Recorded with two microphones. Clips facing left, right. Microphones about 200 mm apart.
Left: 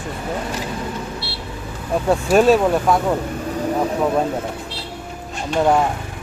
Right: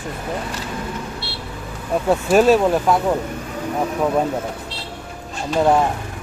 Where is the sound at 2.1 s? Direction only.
Centre (ahead or behind).